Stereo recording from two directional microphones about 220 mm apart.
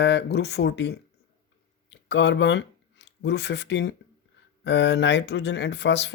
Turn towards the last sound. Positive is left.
turn(degrees=50)  # may be behind; listen again after turning